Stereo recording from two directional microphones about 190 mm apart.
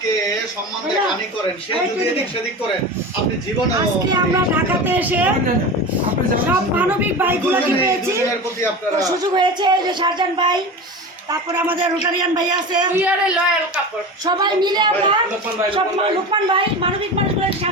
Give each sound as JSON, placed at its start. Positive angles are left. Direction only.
{"t": 4.1, "sound": "a man's voice", "side_deg": -10}
{"t": 6.7, "sound": "a man's voice", "side_deg": -10}
{"t": 13.0, "sound": "a man's voice", "side_deg": -5}
{"t": 14.3, "sound": "speech", "side_deg": -20}
{"t": 16.3, "sound": "speech", "side_deg": -25}